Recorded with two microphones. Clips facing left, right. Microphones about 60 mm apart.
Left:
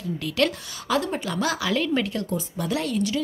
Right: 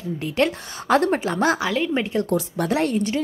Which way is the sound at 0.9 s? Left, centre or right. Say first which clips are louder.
Right 6 dB; right.